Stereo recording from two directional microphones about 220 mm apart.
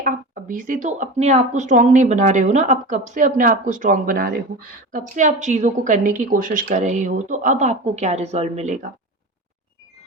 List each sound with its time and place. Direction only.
0.0 s speech: 35° right (ahead or behind)